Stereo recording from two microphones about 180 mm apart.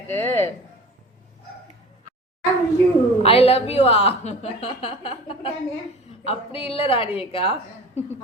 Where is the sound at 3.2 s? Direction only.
35° left (ahead or behind).